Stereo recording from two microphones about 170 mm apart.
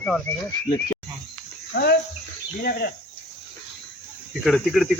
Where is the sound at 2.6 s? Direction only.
60° left (ahead or behind).